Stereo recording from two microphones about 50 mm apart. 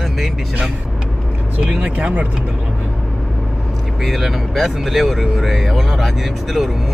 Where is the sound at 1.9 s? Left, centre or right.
Right.